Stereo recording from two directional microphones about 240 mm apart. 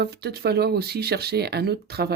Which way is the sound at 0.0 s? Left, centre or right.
Right.